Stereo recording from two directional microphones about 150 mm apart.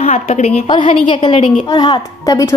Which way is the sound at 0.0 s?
45° left (ahead or behind).